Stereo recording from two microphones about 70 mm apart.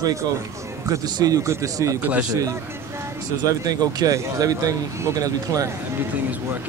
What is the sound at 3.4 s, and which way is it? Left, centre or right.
Speech, right.